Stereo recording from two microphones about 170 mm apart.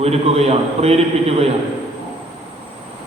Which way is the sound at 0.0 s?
35° right (ahead or behind).